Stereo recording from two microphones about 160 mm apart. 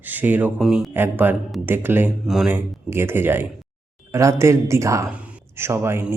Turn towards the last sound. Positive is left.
turn(degrees=-15)  # may be behind; listen again after turning